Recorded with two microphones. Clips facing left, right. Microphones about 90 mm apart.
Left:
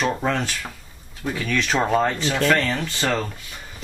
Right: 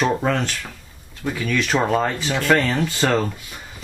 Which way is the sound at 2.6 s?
15° right (ahead or behind).